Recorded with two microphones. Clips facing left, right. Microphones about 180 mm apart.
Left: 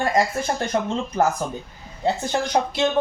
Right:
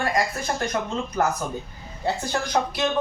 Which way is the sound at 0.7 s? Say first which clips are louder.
Left 7 dB; 30° left (ahead or behind).